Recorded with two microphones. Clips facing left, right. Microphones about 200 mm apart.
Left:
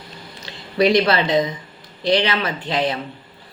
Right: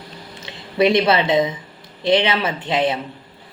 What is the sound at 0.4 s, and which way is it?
Speech, 25° right (ahead or behind).